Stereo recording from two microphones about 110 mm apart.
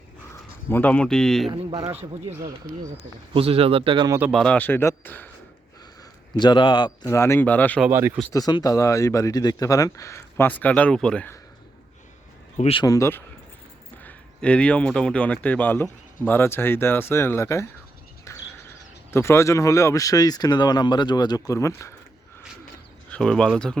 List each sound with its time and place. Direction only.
0.7 s speech: 15° left (ahead or behind)
3.3 s speech: 60° right (ahead or behind)
4.3 s speech: 5° left (ahead or behind)
4.5 s speech: 20° left (ahead or behind)
6.3 s a man's voice: 45° left (ahead or behind)
7.1 s speech: 25° left (ahead or behind)
7.9 s speech: 20° right (ahead or behind)
8.3 s speech: 35° left (ahead or behind); by 11.3 s 10° left (ahead or behind)
12.8 s speech: 30° left (ahead or behind)
14.0 s speech: 15° left (ahead or behind)
18.3 s a sound: 25° left (ahead or behind)
19.1 s speech: 25° left (ahead or behind)
23.0 s speech: 10° left (ahead or behind)